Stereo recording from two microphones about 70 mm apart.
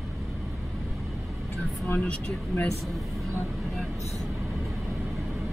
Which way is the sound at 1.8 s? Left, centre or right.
Centre.